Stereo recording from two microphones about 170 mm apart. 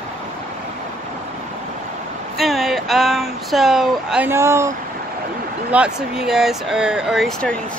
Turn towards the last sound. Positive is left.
turn(degrees=5)  # may be behind; listen again after turning